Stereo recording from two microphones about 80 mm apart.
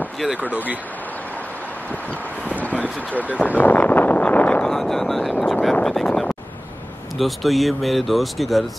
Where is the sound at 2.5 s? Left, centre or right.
Centre.